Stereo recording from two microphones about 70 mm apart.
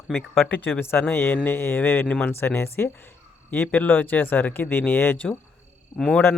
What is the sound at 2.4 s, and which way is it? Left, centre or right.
Speech, left.